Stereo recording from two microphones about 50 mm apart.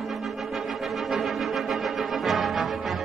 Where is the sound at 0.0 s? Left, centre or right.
Centre.